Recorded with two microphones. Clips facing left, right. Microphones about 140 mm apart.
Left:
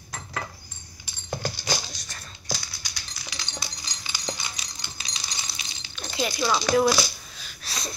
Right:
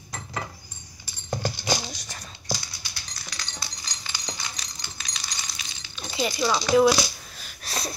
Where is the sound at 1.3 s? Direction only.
15° right (ahead or behind).